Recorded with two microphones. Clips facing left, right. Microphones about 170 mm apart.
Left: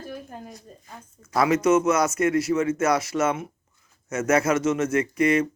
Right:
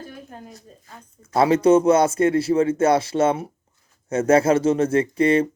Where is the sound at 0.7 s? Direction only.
5° left (ahead or behind).